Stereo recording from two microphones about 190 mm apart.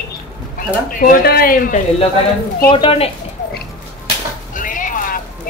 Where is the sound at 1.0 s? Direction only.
50° left (ahead or behind).